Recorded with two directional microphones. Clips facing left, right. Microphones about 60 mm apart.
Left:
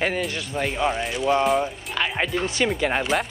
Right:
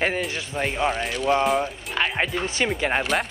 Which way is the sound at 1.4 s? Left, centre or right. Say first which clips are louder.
Left 2 dB; centre.